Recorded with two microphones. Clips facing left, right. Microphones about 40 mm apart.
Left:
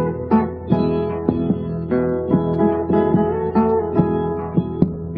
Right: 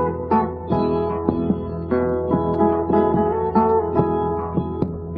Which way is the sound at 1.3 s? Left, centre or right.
Centre.